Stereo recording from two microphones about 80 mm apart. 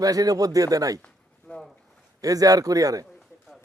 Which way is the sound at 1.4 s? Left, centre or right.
Centre.